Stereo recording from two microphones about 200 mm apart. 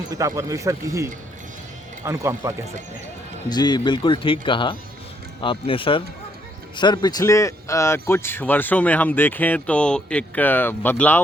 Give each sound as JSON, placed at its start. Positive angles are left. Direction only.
{"t": 0.1, "sound": "speech", "side_deg": -15}
{"t": 3.5, "sound": "a man's voice", "side_deg": 20}